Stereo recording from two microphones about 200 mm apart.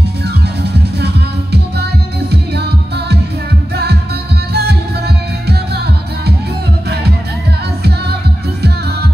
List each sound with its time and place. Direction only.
0.6 s music: 55° right (ahead or behind)
3.7 s music: 55° right (ahead or behind)